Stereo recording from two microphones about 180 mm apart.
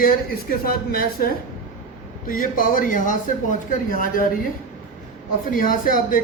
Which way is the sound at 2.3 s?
50° left (ahead or behind).